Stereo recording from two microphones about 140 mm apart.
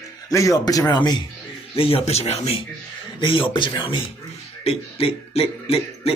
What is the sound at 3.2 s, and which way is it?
Speech, 35° left (ahead or behind).